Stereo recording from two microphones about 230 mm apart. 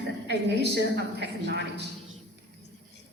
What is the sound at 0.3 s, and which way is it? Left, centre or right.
A woman's voice, right.